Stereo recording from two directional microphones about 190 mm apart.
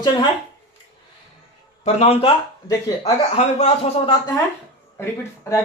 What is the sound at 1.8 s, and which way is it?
Speech, 35° left (ahead or behind).